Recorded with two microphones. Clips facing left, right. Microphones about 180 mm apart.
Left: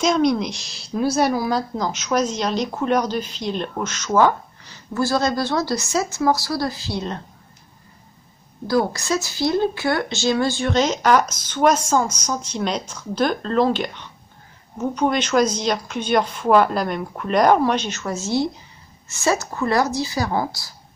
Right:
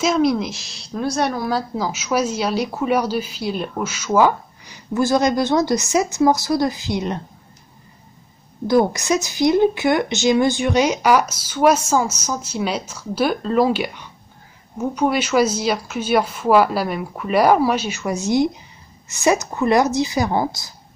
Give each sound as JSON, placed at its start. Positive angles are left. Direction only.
{"t": 0.0, "sound": "a woman's voice", "side_deg": -5}
{"t": 8.6, "sound": "a woman's voice", "side_deg": -20}